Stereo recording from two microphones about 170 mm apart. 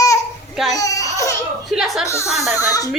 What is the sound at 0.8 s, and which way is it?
Baby cry, 20° left (ahead or behind).